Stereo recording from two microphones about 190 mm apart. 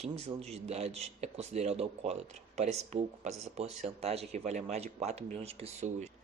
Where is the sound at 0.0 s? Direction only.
35° right (ahead or behind).